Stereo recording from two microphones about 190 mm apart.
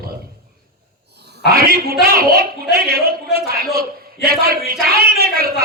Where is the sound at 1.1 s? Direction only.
60° right (ahead or behind).